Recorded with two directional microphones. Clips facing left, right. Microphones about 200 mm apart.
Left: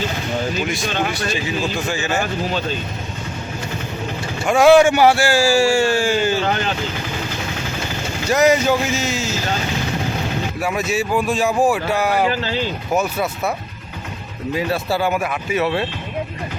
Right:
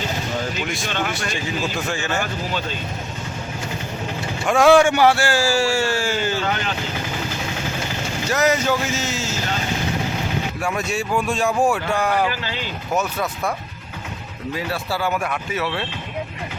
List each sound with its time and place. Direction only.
1.9 s speech: 5° left (ahead or behind)
4.4 s a man's voice: 5° left (ahead or behind)
8.3 s a man's voice: 15° left (ahead or behind)
10.6 s a man's voice: 5° left (ahead or behind)
14.5 s a man's voice: 20° left (ahead or behind)